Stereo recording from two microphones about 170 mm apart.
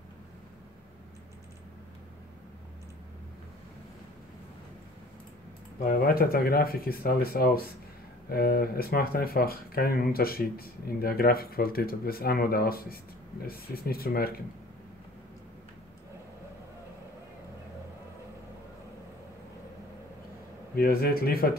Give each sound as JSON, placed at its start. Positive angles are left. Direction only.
{"t": 5.9, "sound": "speech", "side_deg": 60}
{"t": 20.7, "sound": "speech", "side_deg": 60}